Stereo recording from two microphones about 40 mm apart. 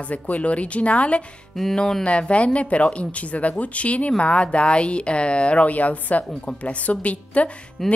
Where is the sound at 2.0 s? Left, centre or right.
Left.